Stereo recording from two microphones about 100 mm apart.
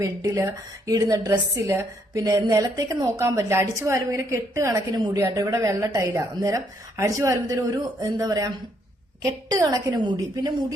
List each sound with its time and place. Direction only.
0.0 s a woman's voice: 30° right (ahead or behind)
9.6 s a woman's voice: 35° right (ahead or behind)
10.0 s a woman's voice: 45° right (ahead or behind)